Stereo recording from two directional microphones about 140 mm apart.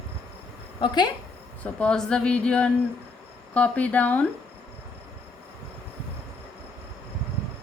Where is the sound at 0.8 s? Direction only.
30° left (ahead or behind).